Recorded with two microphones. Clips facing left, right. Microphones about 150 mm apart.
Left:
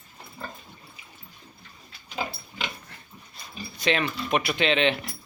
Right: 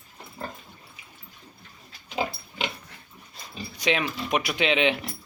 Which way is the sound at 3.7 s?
10° right (ahead or behind).